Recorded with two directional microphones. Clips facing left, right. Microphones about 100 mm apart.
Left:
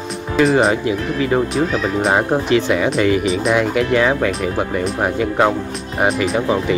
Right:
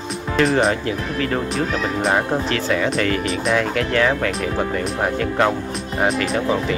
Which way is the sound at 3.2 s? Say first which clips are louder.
Left 4 dB; centre (ahead or behind).